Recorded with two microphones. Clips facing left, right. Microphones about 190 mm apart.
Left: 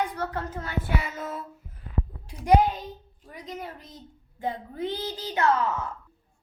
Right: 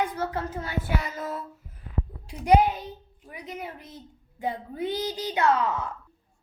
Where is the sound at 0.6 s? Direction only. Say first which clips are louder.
Even; 10° right (ahead or behind).